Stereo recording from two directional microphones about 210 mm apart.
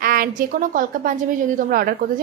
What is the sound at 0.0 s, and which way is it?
A woman's voice, 45° right (ahead or behind).